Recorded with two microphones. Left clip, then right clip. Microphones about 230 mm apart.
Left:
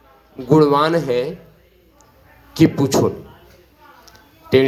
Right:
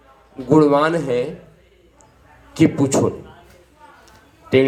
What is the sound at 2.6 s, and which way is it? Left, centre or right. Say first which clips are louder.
Speech: left 1 dB; left.